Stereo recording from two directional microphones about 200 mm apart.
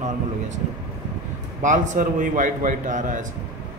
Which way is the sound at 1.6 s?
40° right (ahead or behind).